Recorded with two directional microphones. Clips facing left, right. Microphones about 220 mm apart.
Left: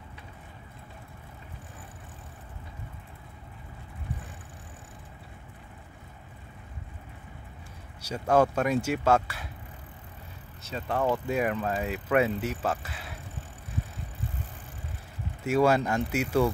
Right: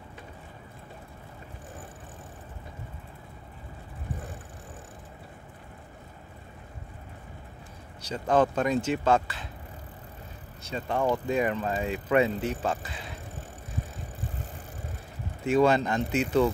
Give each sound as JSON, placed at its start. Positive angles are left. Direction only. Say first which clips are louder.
{"t": 8.0, "sound": "speech", "louder": "left 1 dB", "side_deg": 10}
{"t": 10.6, "sound": "speech", "louder": "right 1 dB", "side_deg": 5}
{"t": 15.4, "sound": "speech", "louder": "right 1 dB", "side_deg": 10}